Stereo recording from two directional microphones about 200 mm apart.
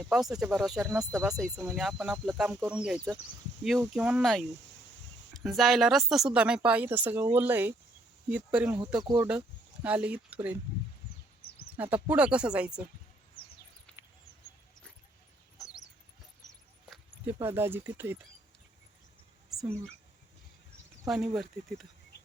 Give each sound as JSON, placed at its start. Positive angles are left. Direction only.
{"t": 0.0, "sound": "speech", "side_deg": 0}
{"t": 12.0, "sound": "speech", "side_deg": -5}
{"t": 13.9, "sound": "bird", "side_deg": 5}
{"t": 15.5, "sound": "a sound", "side_deg": 15}
{"t": 16.9, "sound": "speech", "side_deg": -10}
{"t": 21.1, "sound": "speech", "side_deg": 0}